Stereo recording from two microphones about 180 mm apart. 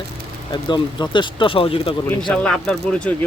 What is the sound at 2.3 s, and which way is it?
Speech, 5° left (ahead or behind).